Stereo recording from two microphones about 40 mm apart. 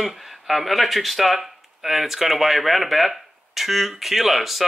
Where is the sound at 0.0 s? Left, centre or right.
Centre.